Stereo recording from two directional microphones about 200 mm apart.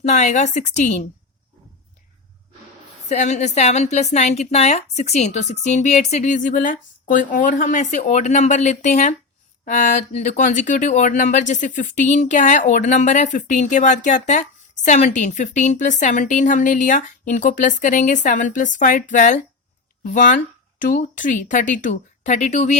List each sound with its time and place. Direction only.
0.0 s speech: 35° left (ahead or behind)
3.1 s speech: 35° left (ahead or behind)